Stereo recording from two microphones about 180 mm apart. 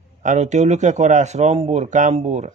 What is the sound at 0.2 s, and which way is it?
Speech, 40° right (ahead or behind).